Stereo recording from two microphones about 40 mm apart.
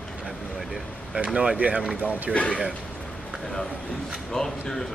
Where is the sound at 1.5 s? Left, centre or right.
Right.